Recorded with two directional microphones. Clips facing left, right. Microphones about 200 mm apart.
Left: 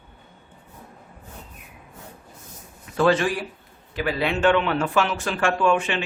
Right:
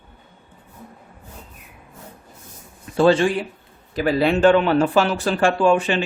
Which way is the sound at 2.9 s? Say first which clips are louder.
Right 4 dB; 30° right (ahead or behind).